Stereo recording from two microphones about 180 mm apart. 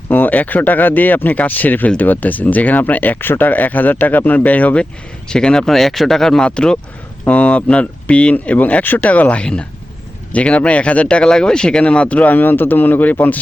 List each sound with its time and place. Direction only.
0.1 s speech: 10° left (ahead or behind)